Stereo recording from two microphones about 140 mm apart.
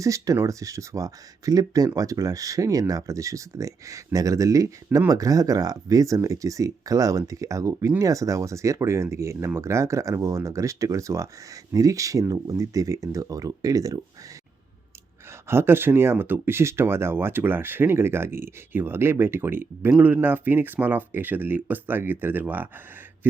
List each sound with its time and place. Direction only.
0.0 s speech: 25° right (ahead or behind)
15.4 s speech: 15° right (ahead or behind)